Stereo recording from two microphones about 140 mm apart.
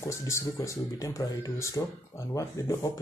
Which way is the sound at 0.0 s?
20° left (ahead or behind).